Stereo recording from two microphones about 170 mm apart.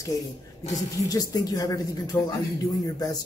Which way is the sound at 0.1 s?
20° left (ahead or behind).